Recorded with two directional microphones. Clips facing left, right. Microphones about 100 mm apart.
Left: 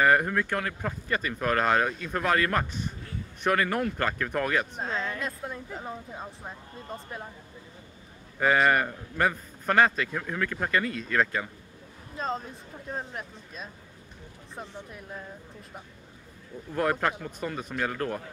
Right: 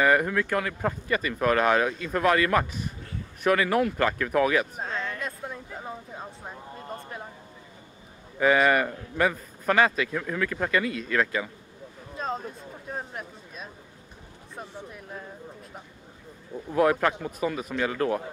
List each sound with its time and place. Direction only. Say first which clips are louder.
0.0 s speech: right 1 dB; centre (ahead or behind)
8.4 s speech: right 2 dB; centre (ahead or behind)
12.2 s a sound: even; centre (ahead or behind)
12.9 s speech: even; centre (ahead or behind)
16.7 s speech: right 4 dB; centre (ahead or behind)